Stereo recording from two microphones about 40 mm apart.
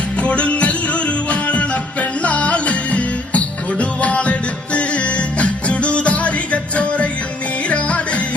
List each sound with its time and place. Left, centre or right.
0.2 s music: left